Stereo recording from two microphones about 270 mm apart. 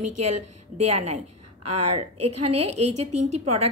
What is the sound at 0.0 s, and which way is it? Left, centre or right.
A woman's voice, right.